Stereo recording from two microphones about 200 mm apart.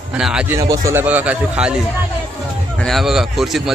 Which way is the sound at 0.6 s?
15° right (ahead or behind).